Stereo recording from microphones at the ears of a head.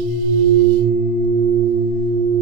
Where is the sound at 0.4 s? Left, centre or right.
Right.